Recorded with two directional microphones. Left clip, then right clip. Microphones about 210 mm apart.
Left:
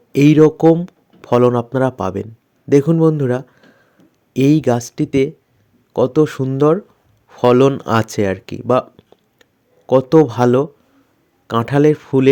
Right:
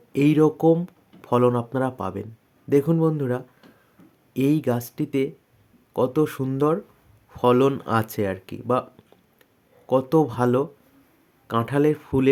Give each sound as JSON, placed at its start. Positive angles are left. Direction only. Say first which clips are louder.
{"t": 0.1, "sound": "speech", "louder": "left 8 dB", "side_deg": 25}